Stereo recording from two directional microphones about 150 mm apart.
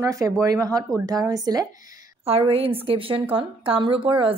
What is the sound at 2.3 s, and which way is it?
Speech, 40° right (ahead or behind).